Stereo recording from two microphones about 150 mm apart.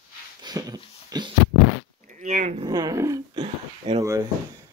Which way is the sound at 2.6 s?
25° right (ahead or behind).